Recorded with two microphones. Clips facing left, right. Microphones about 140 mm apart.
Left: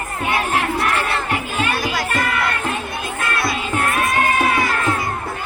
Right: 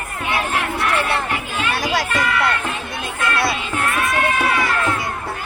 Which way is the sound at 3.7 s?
40° left (ahead or behind).